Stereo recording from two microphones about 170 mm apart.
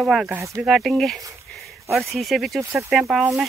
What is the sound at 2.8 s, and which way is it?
Speech, centre (ahead or behind).